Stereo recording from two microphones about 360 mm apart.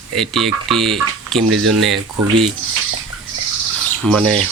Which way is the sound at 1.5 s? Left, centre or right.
Right.